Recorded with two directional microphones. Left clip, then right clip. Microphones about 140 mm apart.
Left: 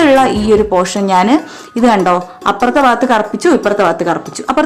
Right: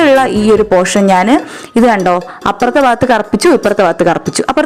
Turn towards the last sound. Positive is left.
turn(degrees=-55)  # may be behind; listen again after turning